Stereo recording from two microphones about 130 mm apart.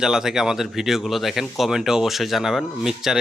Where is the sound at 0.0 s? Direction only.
5° right (ahead or behind).